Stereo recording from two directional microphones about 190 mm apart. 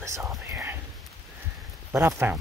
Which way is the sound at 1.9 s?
15° right (ahead or behind).